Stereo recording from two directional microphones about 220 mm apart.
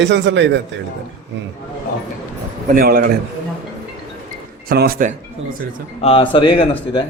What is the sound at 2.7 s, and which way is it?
Speech, 40° right (ahead or behind).